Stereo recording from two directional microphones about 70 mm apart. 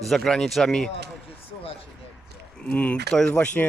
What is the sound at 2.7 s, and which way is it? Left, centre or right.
Speech, centre.